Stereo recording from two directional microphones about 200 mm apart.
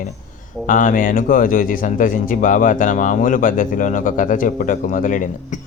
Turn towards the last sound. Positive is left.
turn(degrees=40)  # may be behind; listen again after turning